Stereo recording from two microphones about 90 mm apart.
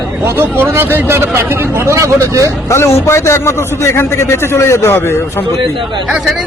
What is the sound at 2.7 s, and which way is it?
A man's voice, 30° left (ahead or behind).